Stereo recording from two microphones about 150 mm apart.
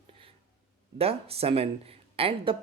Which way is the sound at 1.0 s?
40° right (ahead or behind).